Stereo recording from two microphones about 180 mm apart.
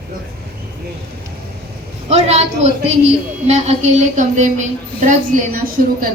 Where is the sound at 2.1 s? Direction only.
35° right (ahead or behind).